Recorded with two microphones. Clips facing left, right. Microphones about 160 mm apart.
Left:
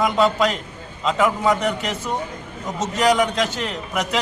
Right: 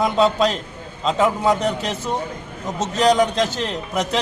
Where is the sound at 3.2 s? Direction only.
30° right (ahead or behind).